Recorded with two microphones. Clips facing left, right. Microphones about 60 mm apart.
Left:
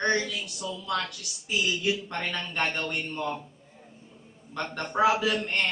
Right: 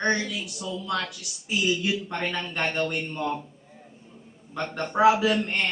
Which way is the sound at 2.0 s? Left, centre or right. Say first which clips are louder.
Right 3 dB; centre.